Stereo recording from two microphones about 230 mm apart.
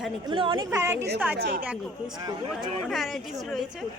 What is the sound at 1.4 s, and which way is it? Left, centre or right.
Speech, right.